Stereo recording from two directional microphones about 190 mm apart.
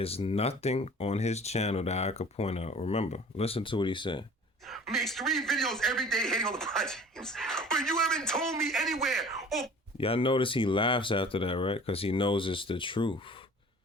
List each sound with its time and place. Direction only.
0.0 s speech: 30° left (ahead or behind)
4.7 s a man's voice: centre (ahead or behind)
10.0 s speech: 30° left (ahead or behind)